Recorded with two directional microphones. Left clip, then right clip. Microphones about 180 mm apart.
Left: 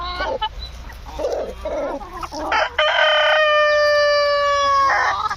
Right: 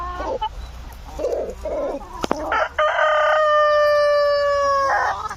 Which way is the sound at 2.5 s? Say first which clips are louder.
Left 3 dB; 35° right (ahead or behind).